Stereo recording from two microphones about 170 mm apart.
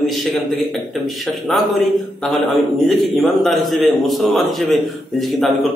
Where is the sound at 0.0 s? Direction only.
Centre (ahead or behind).